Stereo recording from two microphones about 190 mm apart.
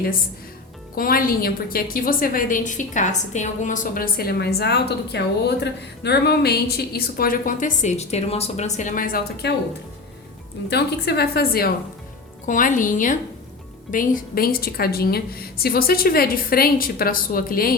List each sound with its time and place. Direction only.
0.9 s a woman's voice: 50° left (ahead or behind)
10.7 s a woman's voice: 60° left (ahead or behind)
12.5 s a woman's voice: 45° left (ahead or behind)